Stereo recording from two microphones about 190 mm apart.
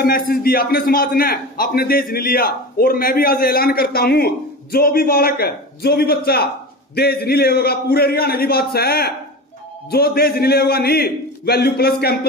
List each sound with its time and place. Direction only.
0.0 s a man's voice: 50° left (ahead or behind)